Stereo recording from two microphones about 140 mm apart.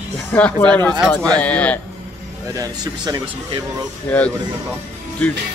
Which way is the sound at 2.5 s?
25° right (ahead or behind).